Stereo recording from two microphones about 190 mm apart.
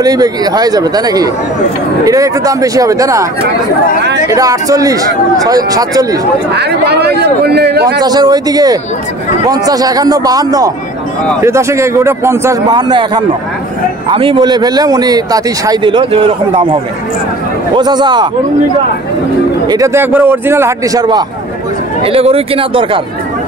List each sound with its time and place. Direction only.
0.0 s a man's voice: 20° right (ahead or behind)
4.3 s a man's voice: 15° right (ahead or behind)
6.5 s speech: 60° right (ahead or behind)
8.0 s a man's voice: 20° right (ahead or behind)
17.7 s a man's voice: 20° right (ahead or behind)
19.7 s a man's voice: 15° right (ahead or behind)
22.0 s a man's voice: 30° right (ahead or behind)